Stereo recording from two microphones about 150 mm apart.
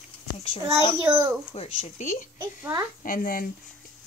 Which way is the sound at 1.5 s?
45° left (ahead or behind).